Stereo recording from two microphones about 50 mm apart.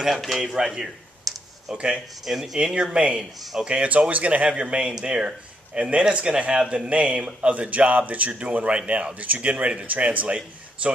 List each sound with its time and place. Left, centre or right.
0.2 s a sound: centre
1.7 s speech: centre
2.2 s speech: centre
2.6 s speech: centre